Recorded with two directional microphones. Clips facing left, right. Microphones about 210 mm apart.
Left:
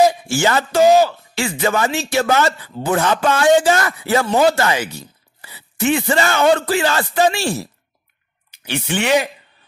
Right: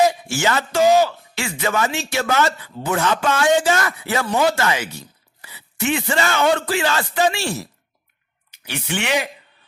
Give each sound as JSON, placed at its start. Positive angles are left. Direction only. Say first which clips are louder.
{"t": 0.3, "sound": "a man's voice", "louder": "left 3 dB", "side_deg": 35}